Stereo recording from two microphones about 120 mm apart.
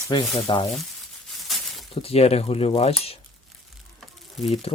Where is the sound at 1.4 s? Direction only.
Centre (ahead or behind).